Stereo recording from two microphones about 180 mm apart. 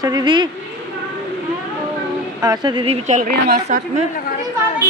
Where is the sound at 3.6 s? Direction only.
40° right (ahead or behind).